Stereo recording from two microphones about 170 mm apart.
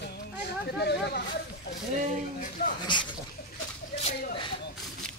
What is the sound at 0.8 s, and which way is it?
Speech, 75° left (ahead or behind).